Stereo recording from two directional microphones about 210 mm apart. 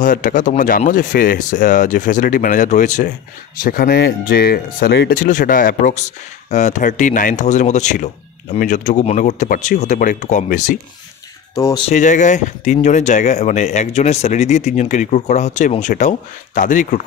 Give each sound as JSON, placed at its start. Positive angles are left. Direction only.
{"t": 0.0, "sound": "speech", "side_deg": 40}
{"t": 11.5, "sound": "speech", "side_deg": 15}
{"t": 11.8, "sound": "speech", "side_deg": 35}